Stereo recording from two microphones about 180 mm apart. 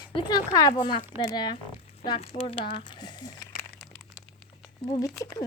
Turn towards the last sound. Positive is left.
turn(degrees=20)  # may be behind; listen again after turning